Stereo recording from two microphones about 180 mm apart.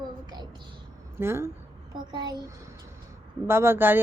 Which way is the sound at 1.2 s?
15° right (ahead or behind).